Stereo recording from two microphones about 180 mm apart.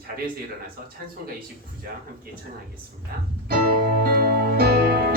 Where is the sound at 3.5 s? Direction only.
55° right (ahead or behind).